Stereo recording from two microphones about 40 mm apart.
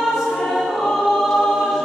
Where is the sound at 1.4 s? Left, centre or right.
Centre.